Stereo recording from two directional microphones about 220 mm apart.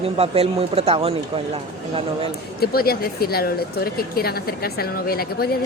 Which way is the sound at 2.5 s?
45° left (ahead or behind).